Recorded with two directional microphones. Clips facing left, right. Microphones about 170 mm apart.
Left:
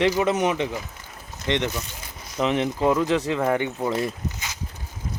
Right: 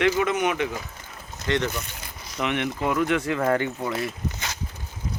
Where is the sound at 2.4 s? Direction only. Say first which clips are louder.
Left 4 dB; 30° left (ahead or behind).